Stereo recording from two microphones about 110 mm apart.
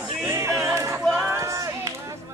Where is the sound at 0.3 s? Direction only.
30° right (ahead or behind).